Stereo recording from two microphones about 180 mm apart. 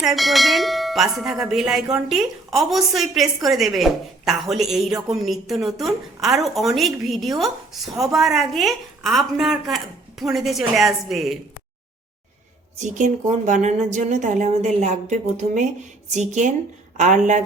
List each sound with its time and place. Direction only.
0.0 s a woman's voice: centre (ahead or behind)
12.8 s a woman's voice: 40° right (ahead or behind)